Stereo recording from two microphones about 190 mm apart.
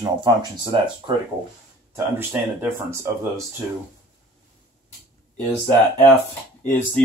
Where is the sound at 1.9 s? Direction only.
10° right (ahead or behind).